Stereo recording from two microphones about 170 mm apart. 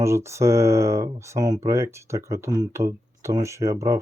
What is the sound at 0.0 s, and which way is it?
Speech, 15° right (ahead or behind).